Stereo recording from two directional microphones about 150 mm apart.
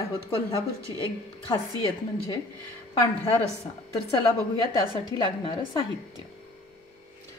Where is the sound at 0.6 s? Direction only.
20° right (ahead or behind).